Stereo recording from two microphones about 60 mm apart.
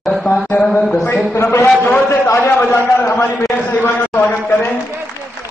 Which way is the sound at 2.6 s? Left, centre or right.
Left.